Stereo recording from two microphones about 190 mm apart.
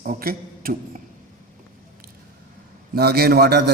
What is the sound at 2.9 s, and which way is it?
Speech, 55° right (ahead or behind).